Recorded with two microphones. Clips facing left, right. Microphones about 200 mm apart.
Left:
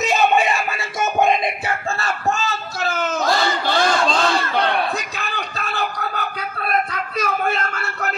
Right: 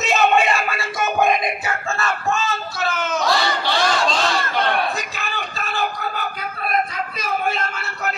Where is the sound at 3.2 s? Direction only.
50° left (ahead or behind).